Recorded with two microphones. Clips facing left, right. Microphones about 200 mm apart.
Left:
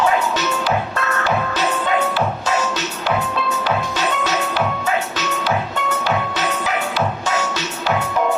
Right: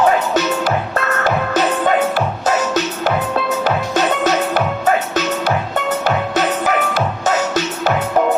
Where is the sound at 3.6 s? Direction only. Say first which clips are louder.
Right 4 dB; 45° right (ahead or behind).